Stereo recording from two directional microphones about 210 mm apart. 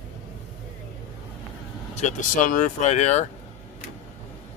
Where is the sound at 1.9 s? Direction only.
35° left (ahead or behind).